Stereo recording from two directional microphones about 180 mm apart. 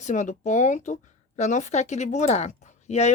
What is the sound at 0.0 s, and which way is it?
Speech, 40° left (ahead or behind).